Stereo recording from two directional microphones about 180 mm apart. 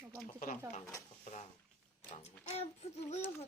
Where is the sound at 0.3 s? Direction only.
45° left (ahead or behind).